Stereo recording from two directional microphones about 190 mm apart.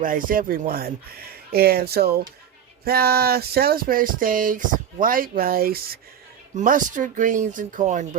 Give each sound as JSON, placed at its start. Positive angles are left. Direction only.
{"t": 0.0, "sound": "speech", "side_deg": -45}